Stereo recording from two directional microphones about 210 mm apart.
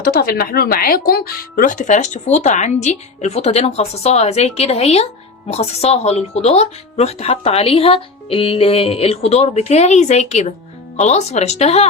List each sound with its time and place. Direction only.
0.0 s speech: 45° left (ahead or behind)